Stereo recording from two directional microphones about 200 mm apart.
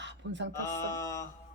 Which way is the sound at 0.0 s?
60° right (ahead or behind).